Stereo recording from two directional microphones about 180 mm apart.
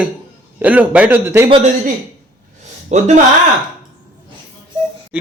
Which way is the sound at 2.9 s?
40° right (ahead or behind).